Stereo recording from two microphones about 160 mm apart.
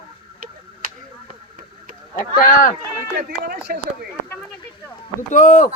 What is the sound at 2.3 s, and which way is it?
Speech, 55° left (ahead or behind).